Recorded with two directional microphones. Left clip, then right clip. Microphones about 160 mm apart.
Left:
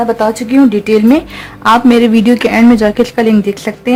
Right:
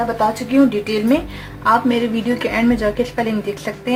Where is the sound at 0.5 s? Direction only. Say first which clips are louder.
Left 10 dB; 75° left (ahead or behind).